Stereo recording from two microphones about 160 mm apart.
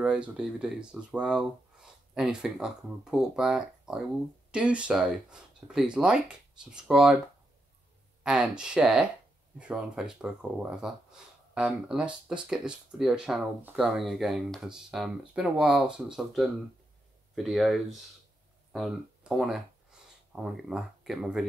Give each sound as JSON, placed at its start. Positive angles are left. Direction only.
{"t": 0.0, "sound": "speech", "side_deg": -5}
{"t": 8.2, "sound": "speech", "side_deg": -5}